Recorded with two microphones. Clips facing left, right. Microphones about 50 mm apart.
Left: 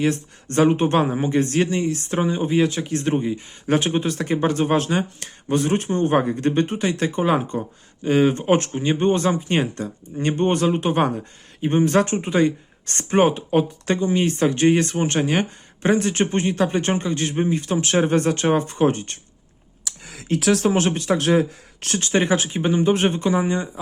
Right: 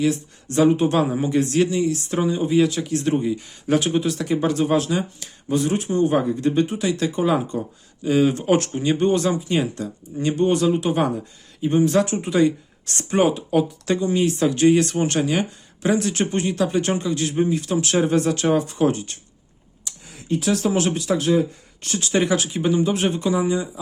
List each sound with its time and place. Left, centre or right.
0.0 s speech: left
1.0 s speech: left
19.8 s a sound: left
20.6 s speech: left
21.2 s speech: left
22.1 s speech: left